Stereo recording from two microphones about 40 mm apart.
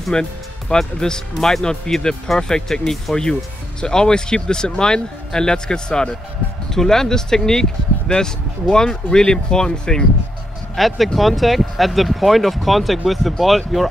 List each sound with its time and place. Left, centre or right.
0.1 s speech: centre
10.8 s speech: centre